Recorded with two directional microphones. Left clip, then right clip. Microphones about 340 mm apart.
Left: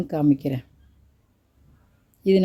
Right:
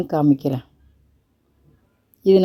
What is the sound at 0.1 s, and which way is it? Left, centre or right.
Speech, centre.